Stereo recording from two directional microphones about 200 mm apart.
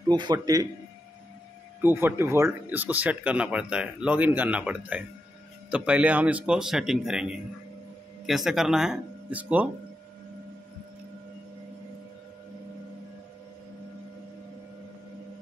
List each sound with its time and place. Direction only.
0.1 s a man's voice: 20° right (ahead or behind)
1.8 s speech: 10° right (ahead or behind)